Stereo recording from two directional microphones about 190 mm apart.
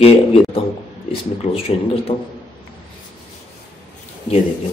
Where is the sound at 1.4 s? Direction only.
30° left (ahead or behind).